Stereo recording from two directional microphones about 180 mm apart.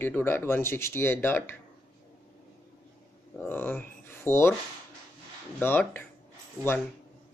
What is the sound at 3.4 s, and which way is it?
Speech, 10° left (ahead or behind).